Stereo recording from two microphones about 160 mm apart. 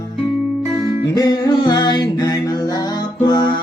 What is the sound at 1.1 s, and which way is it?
Music, 25° left (ahead or behind).